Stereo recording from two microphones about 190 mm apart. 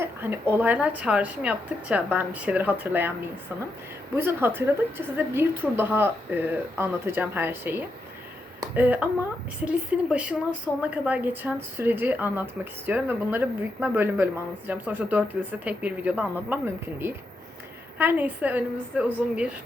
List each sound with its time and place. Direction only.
0.0 s speech: 10° right (ahead or behind)
4.1 s speech: 10° right (ahead or behind)